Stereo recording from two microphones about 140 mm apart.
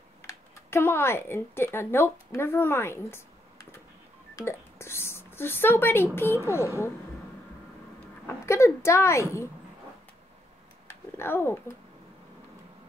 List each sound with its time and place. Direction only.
0.2 s speech: 15° left (ahead or behind)
4.4 s speech: 20° left (ahead or behind)
8.3 s a woman's voice: 20° left (ahead or behind)
10.9 s speech: 15° left (ahead or behind)